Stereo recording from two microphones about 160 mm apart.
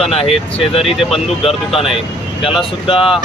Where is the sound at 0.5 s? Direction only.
40° left (ahead or behind).